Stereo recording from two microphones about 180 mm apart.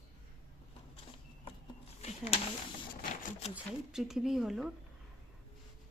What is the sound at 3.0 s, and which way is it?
Sewing machine, 45° left (ahead or behind).